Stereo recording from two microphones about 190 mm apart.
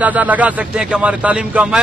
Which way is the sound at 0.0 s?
10° right (ahead or behind).